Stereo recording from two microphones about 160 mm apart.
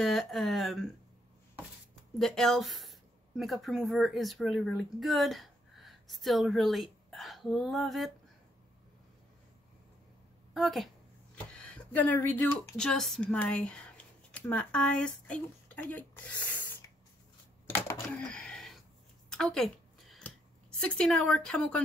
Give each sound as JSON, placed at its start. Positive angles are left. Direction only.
{"t": 0.0, "sound": "speech", "side_deg": 0}
{"t": 2.1, "sound": "a woman's voice", "side_deg": 0}
{"t": 10.5, "sound": "a woman's voice", "side_deg": 0}
{"t": 18.1, "sound": "a sound", "side_deg": 5}
{"t": 20.8, "sound": "speech", "side_deg": 5}